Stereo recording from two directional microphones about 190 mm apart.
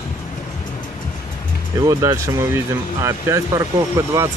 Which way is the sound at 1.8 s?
15° right (ahead or behind).